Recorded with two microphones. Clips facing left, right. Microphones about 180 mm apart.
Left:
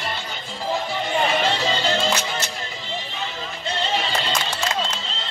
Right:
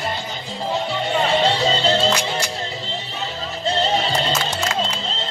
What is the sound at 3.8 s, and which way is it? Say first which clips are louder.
Music: right 3 dB; 40° right (ahead or behind).